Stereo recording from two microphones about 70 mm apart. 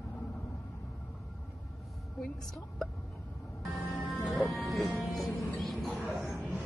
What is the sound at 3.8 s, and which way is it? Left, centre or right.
Music, centre.